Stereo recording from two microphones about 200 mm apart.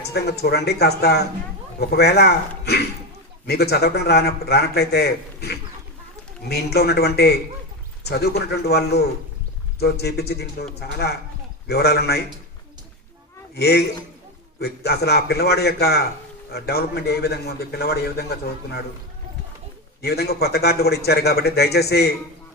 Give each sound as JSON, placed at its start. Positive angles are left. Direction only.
{"t": 0.1, "sound": "a man's voice", "side_deg": 55}
{"t": 13.6, "sound": "a man's voice", "side_deg": 55}
{"t": 20.0, "sound": "a man's voice", "side_deg": 55}